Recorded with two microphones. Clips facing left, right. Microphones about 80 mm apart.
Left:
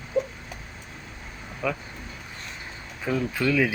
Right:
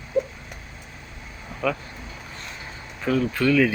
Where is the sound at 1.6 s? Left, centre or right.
Centre.